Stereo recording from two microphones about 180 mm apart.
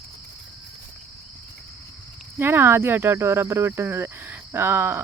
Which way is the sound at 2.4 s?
10° right (ahead or behind).